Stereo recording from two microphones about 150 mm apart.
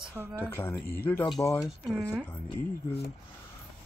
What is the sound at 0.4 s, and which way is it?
Speech, 15° left (ahead or behind).